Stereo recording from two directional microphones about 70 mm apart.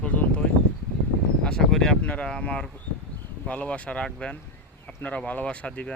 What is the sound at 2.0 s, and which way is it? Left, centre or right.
Speech, centre.